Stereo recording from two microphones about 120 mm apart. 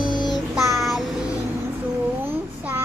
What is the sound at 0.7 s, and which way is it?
Child singing, centre (ahead or behind).